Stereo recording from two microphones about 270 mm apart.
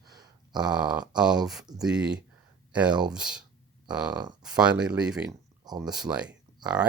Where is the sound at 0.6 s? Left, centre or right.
Centre.